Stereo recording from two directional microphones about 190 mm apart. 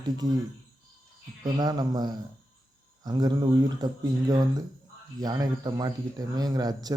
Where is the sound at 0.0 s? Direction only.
20° right (ahead or behind).